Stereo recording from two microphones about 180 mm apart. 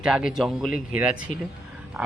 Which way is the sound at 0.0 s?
5° right (ahead or behind).